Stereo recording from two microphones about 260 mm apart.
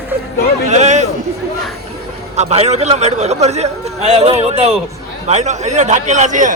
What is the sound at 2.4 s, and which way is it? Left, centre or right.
A man's voice, right.